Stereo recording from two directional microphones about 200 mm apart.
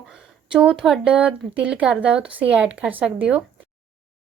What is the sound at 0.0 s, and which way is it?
Speech, 5° right (ahead or behind).